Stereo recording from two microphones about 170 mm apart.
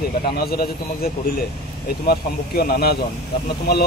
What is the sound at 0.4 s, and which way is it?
Speech, 65° left (ahead or behind).